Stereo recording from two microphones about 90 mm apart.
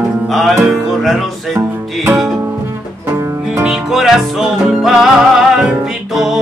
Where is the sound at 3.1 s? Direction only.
30° right (ahead or behind).